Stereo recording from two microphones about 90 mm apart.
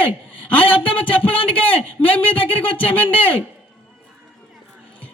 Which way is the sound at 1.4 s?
75° left (ahead or behind).